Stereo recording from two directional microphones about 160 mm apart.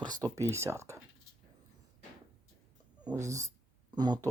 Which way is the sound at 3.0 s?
10° right (ahead or behind).